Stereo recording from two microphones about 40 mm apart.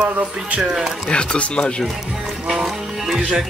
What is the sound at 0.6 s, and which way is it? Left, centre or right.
Speech, centre.